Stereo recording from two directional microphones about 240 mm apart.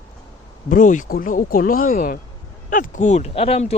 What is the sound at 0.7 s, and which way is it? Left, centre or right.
Speech, left.